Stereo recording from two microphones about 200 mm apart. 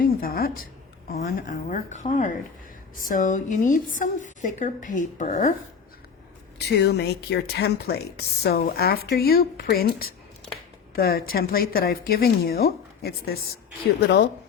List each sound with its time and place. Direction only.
0.0 s a woman's voice: 45° left (ahead or behind)
6.7 s speech: 55° left (ahead or behind)